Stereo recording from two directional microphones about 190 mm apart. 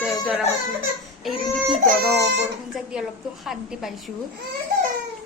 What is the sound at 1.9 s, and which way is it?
Speech, 55° right (ahead or behind).